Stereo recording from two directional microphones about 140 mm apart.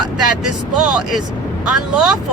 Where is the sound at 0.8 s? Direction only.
5° right (ahead or behind).